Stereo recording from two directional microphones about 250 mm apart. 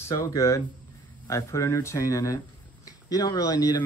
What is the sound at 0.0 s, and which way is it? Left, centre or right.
Speech, centre.